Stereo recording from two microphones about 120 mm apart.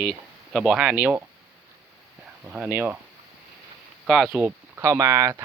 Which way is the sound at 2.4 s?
15° right (ahead or behind).